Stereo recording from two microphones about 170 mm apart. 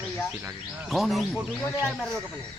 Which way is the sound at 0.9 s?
Centre (ahead or behind).